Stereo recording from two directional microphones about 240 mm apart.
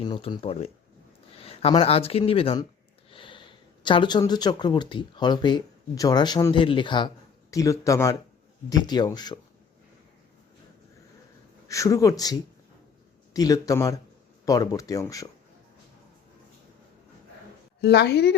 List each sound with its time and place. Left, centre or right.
0.0 s speech: centre
11.7 s speech: centre
17.7 s a woman's voice: left